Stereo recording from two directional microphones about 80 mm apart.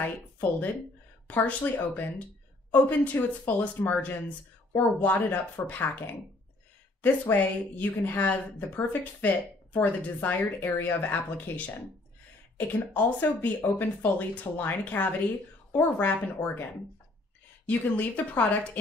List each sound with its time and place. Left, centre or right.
0.0 s speech: left
17.6 s speech: left